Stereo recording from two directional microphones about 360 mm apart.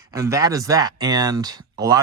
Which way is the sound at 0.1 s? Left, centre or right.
Centre.